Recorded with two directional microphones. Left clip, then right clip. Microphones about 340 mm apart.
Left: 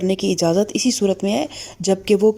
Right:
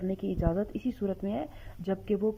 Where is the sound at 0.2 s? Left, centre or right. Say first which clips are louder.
Left 13 dB; left.